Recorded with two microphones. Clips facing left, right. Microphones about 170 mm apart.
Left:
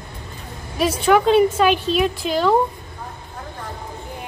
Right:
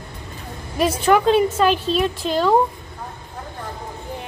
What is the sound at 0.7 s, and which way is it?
A woman's voice, 5° left (ahead or behind).